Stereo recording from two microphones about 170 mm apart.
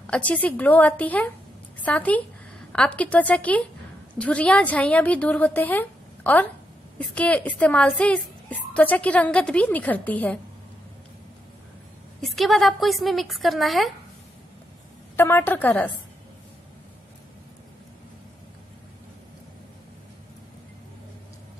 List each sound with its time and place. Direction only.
0.0 s a woman's voice: 5° left (ahead or behind)
12.2 s a woman's voice: centre (ahead or behind)
15.1 s a woman's voice: 15° left (ahead or behind)